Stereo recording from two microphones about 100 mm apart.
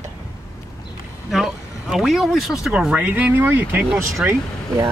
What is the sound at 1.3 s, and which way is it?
Speech, 5° right (ahead or behind).